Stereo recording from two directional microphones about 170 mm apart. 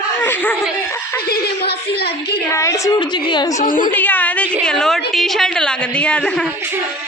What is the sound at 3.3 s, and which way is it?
Speech, 25° left (ahead or behind).